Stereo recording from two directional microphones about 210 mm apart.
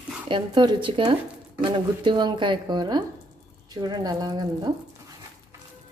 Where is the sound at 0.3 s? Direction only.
20° right (ahead or behind).